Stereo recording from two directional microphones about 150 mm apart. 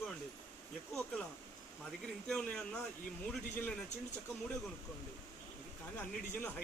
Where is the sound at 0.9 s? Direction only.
5° left (ahead or behind).